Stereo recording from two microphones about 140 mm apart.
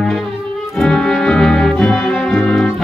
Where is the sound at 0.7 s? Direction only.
Centre (ahead or behind).